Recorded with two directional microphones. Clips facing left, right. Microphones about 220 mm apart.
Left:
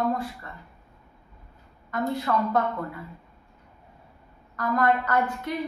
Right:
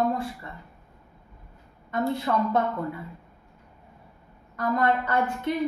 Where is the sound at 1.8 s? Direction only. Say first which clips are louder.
Right 1 dB; 25° right (ahead or behind).